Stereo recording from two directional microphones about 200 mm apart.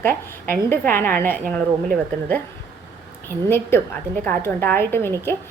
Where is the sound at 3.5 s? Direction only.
10° left (ahead or behind).